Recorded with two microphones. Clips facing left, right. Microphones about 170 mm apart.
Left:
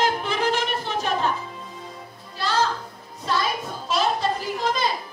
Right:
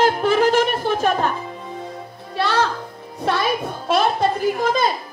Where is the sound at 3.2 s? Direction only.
65° right (ahead or behind).